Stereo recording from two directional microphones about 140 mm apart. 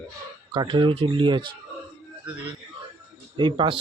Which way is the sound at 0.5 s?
35° right (ahead or behind).